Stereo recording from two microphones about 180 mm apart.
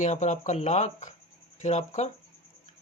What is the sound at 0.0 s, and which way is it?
Speech, 40° left (ahead or behind).